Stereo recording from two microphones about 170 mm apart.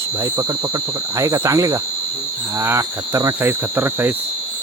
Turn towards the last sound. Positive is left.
turn(degrees=-15)  # may be behind; listen again after turning